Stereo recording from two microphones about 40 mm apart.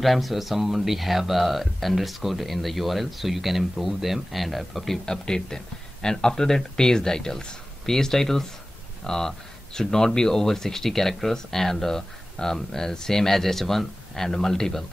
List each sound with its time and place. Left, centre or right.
0.0 s speech: centre
5.0 s speech: centre